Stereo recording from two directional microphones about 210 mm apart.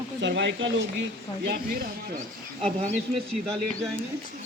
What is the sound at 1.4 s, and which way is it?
Speech, 45° right (ahead or behind).